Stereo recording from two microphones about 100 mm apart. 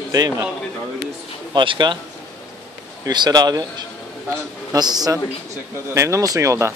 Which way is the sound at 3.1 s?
45° right (ahead or behind).